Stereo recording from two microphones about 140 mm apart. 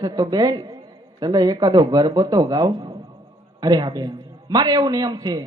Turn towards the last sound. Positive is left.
turn(degrees=-30)  # may be behind; listen again after turning